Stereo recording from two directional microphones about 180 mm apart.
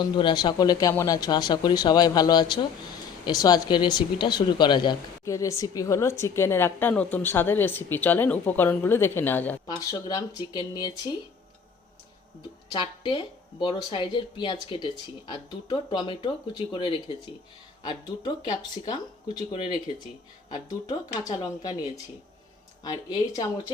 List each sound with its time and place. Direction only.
0.0 s speech: 25° left (ahead or behind)
13.0 s speech: 25° left (ahead or behind)